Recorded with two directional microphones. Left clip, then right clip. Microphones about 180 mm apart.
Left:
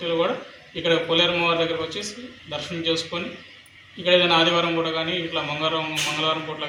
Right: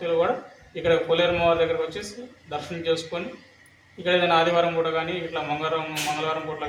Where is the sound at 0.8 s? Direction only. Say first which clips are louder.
Left 1 dB; 20° right (ahead or behind).